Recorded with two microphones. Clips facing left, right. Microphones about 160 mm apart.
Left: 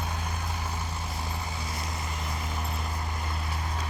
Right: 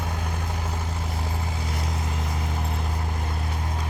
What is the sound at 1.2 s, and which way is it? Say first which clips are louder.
Vehicle: right 4 dB; 60° right (ahead or behind).